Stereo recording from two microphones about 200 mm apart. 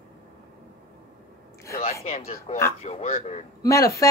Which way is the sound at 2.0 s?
30° left (ahead or behind).